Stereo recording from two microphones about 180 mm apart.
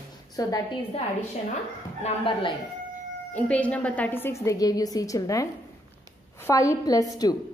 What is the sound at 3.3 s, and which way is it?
A woman's voice, 5° left (ahead or behind).